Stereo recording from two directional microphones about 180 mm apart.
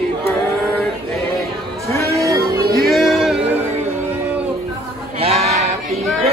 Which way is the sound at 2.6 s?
55° right (ahead or behind).